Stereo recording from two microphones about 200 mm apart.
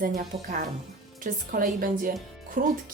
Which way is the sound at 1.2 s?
45° right (ahead or behind).